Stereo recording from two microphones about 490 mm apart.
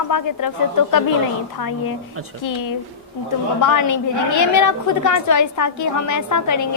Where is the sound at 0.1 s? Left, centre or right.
Left.